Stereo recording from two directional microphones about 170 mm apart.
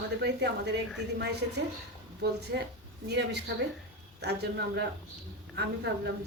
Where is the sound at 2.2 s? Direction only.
75° right (ahead or behind).